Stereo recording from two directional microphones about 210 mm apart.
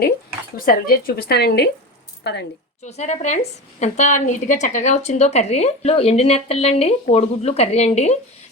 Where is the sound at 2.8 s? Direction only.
35° left (ahead or behind).